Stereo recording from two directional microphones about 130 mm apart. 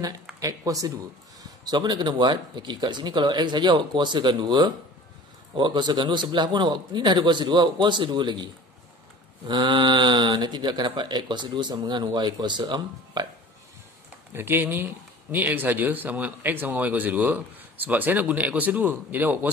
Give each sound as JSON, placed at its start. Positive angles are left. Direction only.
{"t": 0.4, "sound": "speech", "side_deg": -30}
{"t": 9.5, "sound": "speech", "side_deg": -35}
{"t": 14.3, "sound": "speech", "side_deg": -15}